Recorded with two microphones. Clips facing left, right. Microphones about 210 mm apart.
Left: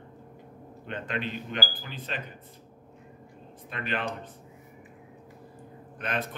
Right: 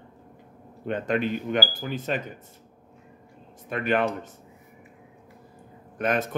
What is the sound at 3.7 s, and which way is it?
Speech, 50° right (ahead or behind).